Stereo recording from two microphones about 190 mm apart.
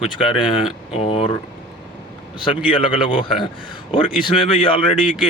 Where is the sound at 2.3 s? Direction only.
25° left (ahead or behind).